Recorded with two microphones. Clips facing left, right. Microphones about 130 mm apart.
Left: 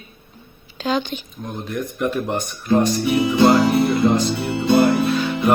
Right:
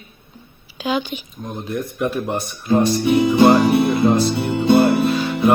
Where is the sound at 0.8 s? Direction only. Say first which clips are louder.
Even; 10° right (ahead or behind).